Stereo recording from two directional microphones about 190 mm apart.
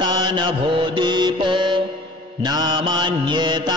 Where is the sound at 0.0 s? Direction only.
25° right (ahead or behind).